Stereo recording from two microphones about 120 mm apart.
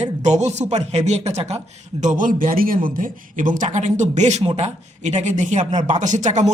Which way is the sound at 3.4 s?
90° right.